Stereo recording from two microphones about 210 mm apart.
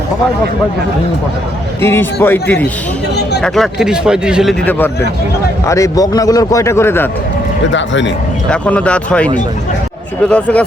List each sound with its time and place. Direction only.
1.8 s a man's voice: 10° left (ahead or behind)
5.6 s a man's voice: 15° left (ahead or behind)
7.7 s speech: 60° left (ahead or behind)
8.4 s speech: 5° left (ahead or behind)